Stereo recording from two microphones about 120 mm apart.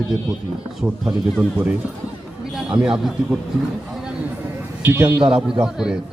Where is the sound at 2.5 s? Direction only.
5° right (ahead or behind).